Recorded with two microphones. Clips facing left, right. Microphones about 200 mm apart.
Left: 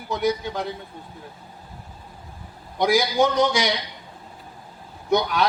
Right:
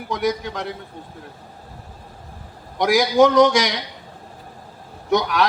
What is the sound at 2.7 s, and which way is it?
Speech, 90° right.